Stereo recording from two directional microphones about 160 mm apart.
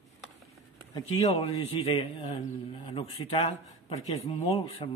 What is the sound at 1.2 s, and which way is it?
A man's voice, 40° left (ahead or behind).